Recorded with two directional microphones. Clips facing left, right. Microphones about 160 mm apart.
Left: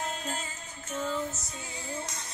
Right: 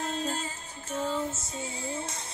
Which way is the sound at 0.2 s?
30° right (ahead or behind).